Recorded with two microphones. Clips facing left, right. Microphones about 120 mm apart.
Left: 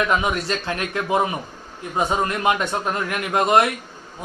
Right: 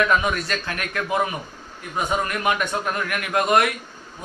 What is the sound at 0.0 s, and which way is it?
Speech, 20° left (ahead or behind).